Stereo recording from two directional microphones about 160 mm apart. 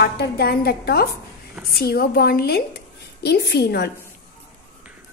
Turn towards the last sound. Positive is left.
turn(degrees=90)